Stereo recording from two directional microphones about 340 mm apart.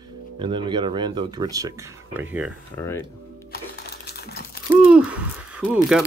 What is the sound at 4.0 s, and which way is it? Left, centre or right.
Typing, left.